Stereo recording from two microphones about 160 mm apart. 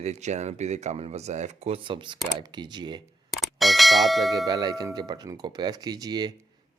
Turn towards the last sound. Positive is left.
turn(degrees=-25)  # may be behind; listen again after turning